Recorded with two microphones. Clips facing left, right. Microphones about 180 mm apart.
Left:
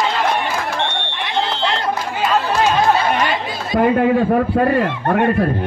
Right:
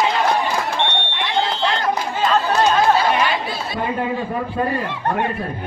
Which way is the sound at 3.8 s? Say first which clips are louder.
Left 10 dB; 65° left (ahead or behind).